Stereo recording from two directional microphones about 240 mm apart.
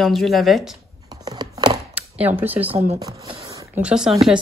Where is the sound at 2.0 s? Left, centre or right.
Centre.